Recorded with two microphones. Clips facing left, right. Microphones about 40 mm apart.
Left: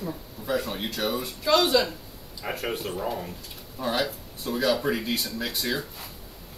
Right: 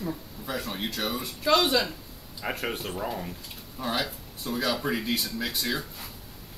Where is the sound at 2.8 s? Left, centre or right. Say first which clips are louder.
Left 2 dB; centre.